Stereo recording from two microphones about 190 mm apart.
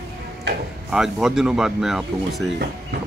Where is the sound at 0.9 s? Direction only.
Centre (ahead or behind).